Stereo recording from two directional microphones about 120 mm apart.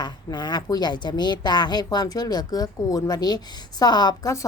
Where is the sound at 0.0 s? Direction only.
35° left (ahead or behind).